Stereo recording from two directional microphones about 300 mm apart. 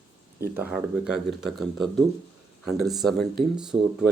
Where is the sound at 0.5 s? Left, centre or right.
Centre.